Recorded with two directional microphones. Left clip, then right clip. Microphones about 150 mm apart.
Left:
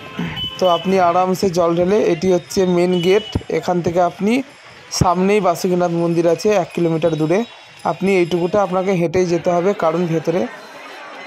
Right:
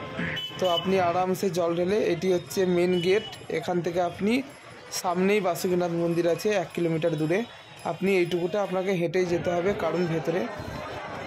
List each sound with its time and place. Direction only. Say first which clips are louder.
0.6 s speech: left 10 dB; 50° left (ahead or behind)